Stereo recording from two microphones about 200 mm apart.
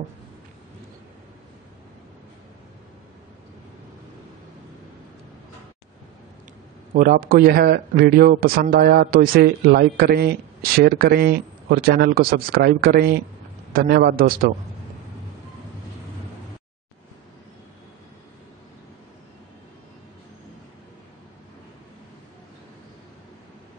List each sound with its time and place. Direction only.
6.9 s a man's voice: 45° right (ahead or behind)